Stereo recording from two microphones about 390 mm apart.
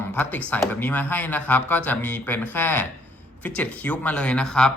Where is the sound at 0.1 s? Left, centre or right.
Centre.